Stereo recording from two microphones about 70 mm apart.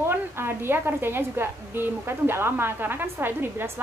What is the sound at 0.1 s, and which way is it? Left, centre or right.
A woman's voice, right.